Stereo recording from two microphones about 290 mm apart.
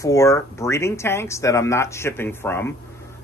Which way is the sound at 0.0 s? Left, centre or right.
Centre.